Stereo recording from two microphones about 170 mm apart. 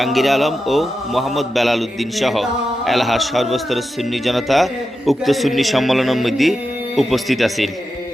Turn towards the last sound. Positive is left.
turn(degrees=0)  # may be behind; listen again after turning